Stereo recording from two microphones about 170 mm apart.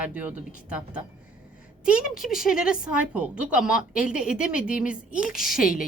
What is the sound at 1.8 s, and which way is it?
A woman's voice, 5° right (ahead or behind).